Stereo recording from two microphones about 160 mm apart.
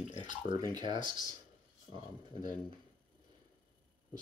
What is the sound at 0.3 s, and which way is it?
Speech, 25° right (ahead or behind).